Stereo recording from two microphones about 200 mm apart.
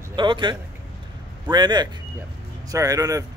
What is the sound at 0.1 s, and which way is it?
A man's voice, 25° right (ahead or behind).